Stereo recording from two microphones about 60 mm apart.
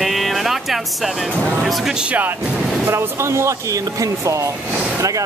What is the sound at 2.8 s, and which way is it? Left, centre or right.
Speech, right.